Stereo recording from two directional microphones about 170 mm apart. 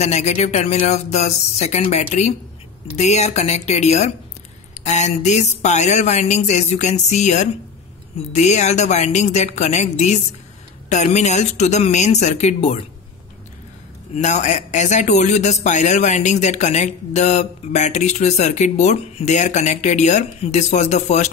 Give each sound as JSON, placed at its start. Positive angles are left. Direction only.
{"t": 0.0, "sound": "speech", "side_deg": 40}
{"t": 14.1, "sound": "speech", "side_deg": 45}